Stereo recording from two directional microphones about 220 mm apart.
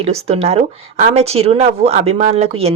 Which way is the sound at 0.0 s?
30° right (ahead or behind).